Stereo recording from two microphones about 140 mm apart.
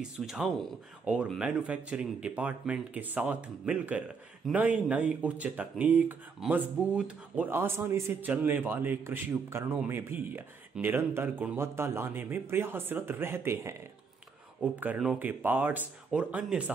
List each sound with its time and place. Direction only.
0.2 s speech: 5° right (ahead or behind)